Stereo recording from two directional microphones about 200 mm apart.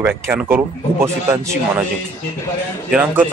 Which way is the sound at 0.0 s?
10° right (ahead or behind).